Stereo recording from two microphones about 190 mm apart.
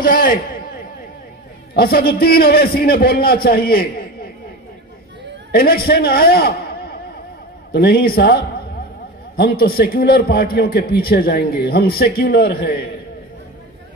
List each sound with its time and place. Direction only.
0.0 s a man's voice: 45° left (ahead or behind)
1.7 s a man's voice: 55° left (ahead or behind)
5.5 s a man's voice: 55° left (ahead or behind)